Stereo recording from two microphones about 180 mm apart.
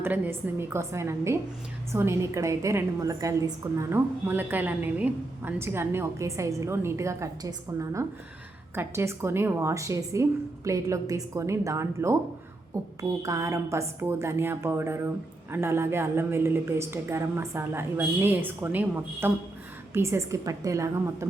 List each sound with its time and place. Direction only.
0.0 s a woman's voice: 10° right (ahead or behind)